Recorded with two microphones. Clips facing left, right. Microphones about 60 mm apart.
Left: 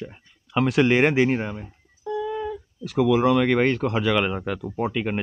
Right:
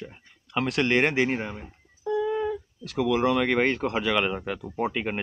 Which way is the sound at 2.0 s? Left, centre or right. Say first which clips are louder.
Right 2 dB; centre.